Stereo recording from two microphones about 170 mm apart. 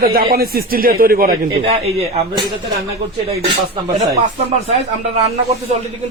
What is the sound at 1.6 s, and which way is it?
Speech, 35° right (ahead or behind).